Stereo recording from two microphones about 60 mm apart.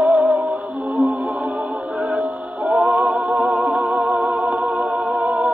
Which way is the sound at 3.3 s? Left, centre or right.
Right.